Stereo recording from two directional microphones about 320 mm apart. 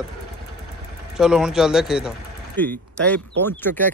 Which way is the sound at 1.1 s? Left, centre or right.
Centre.